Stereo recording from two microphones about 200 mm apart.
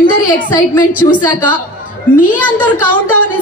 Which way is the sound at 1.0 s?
15° left (ahead or behind).